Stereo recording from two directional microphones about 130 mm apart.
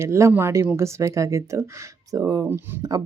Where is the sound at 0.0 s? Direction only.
20° right (ahead or behind).